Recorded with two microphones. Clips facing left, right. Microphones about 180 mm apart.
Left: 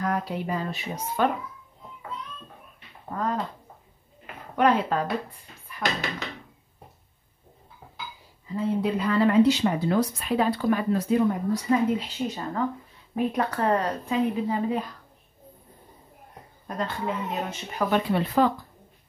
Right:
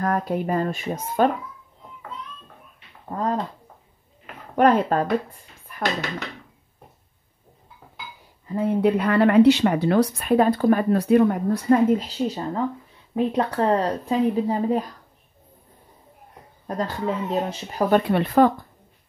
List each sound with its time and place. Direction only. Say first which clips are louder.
0.0 s speech: right 4 dB; 50° right (ahead or behind)
3.1 s speech: right 3 dB; 30° right (ahead or behind)
4.6 s speech: right 4 dB; 45° right (ahead or behind)
8.5 s speech: right 5 dB; 60° right (ahead or behind); by 14.9 s 40° right (ahead or behind)
16.6 s speech: right 4 dB; 35° right (ahead or behind)
18.0 s speech: right 5 dB; 60° right (ahead or behind)